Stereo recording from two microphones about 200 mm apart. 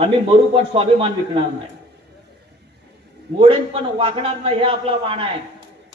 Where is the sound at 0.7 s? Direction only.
25° right (ahead or behind).